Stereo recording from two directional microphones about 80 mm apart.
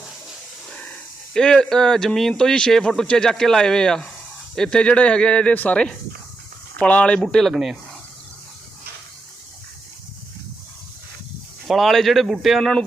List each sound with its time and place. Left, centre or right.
0.7 s a sound: centre
2.4 s speech: centre
7.2 s speech: centre
11.7 s speech: centre